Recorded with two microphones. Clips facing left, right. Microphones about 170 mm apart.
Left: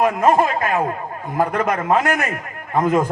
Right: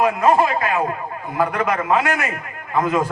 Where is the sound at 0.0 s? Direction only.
45° left (ahead or behind).